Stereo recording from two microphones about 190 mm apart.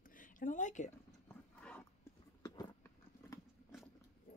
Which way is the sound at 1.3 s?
5° left (ahead or behind).